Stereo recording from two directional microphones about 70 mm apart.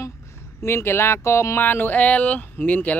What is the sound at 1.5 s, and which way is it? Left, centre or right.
Speech, left.